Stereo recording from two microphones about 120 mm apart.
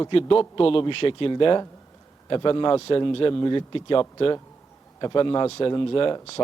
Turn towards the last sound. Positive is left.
turn(degrees=50)  # may be behind; listen again after turning